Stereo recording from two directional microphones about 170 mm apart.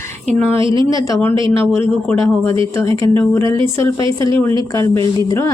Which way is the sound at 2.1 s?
5° left (ahead or behind).